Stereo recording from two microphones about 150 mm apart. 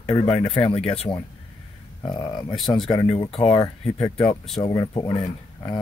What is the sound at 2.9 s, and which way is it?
Speech, 35° left (ahead or behind).